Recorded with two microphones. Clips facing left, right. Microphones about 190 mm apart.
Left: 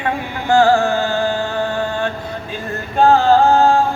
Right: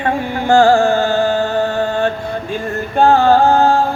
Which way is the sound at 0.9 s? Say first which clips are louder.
Right 4 dB; 55° right (ahead or behind).